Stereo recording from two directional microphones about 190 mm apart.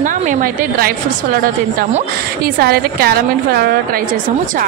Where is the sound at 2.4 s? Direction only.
55° right (ahead or behind).